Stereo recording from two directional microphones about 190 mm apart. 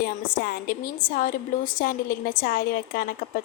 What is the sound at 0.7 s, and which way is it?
A woman's voice, 50° left (ahead or behind).